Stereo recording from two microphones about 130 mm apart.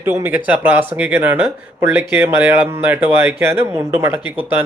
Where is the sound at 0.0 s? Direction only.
15° right (ahead or behind).